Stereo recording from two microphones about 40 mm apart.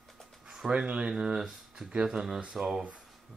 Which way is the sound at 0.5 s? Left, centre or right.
Right.